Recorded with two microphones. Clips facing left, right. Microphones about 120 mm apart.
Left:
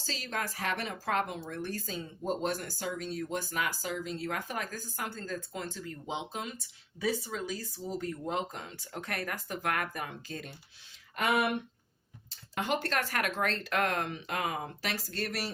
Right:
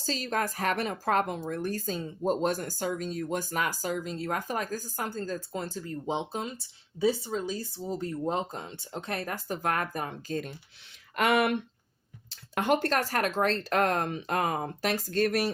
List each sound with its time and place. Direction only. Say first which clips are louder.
0.0 s speech: right 6 dB; 40° right (ahead or behind)
11.1 s speech: right 4 dB; 90° right
12.3 s speech: right 6 dB; 55° right (ahead or behind)